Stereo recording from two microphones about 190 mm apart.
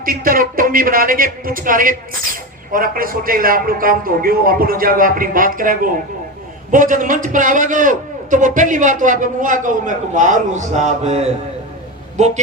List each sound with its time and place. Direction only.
0.0 s speech: 50° right (ahead or behind)